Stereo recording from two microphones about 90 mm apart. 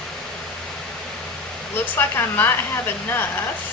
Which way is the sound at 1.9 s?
25° left (ahead or behind).